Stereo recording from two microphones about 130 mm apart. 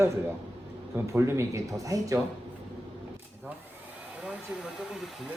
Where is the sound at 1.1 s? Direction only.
20° right (ahead or behind).